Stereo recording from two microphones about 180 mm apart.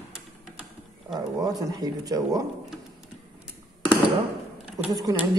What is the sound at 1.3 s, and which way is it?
Speech, 20° right (ahead or behind).